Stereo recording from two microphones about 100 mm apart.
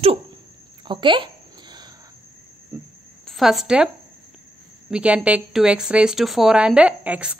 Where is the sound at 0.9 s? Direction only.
55° right (ahead or behind).